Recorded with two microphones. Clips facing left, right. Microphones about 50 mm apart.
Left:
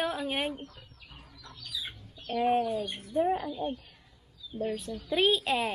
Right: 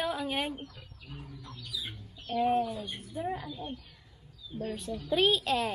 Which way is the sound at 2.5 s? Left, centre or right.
Left.